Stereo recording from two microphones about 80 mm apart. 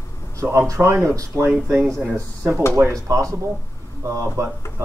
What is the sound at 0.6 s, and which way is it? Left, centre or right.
Speech, right.